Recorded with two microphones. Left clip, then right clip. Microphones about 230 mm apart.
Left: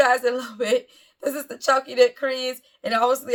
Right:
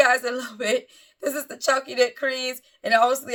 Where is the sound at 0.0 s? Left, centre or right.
Centre.